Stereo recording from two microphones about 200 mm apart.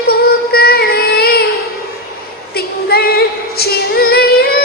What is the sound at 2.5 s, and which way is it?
Female singing, 50° left (ahead or behind).